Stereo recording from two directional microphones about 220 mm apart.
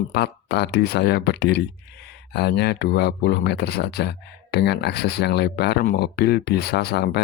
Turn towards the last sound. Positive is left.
turn(degrees=45)  # may be behind; listen again after turning